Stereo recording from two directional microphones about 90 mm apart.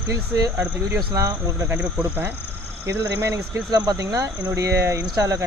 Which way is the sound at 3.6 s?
45° right (ahead or behind).